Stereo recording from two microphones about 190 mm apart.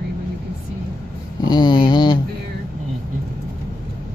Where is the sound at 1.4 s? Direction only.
25° left (ahead or behind).